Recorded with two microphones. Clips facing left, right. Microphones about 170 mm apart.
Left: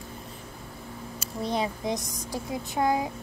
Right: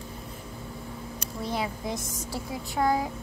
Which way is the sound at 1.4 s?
20° left (ahead or behind).